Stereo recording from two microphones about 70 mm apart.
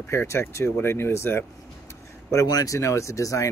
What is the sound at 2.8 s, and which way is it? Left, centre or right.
Speech, left.